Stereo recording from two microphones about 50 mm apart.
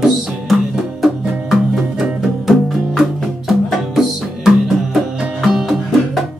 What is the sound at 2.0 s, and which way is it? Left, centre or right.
Music, centre.